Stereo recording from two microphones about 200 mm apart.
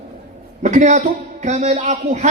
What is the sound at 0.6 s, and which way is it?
A man's voice, 35° right (ahead or behind).